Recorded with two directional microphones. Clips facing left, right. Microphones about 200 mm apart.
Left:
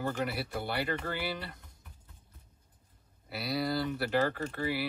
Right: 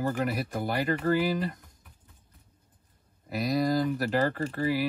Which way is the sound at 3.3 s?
45° right (ahead or behind).